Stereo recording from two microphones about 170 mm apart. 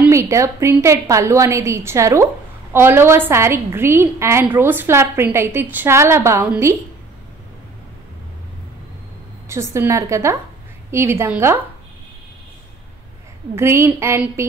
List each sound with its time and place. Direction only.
0.0 s a woman's voice: 15° right (ahead or behind)
9.5 s a woman's voice: 15° right (ahead or behind)
13.6 s a woman's voice: 15° right (ahead or behind)